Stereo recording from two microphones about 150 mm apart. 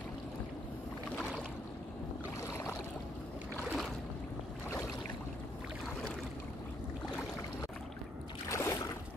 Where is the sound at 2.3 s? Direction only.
20° left (ahead or behind).